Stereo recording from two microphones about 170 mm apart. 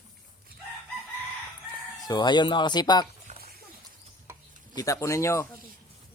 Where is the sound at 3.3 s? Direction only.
45° right (ahead or behind).